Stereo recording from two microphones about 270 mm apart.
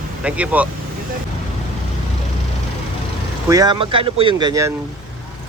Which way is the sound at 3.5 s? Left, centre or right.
Centre.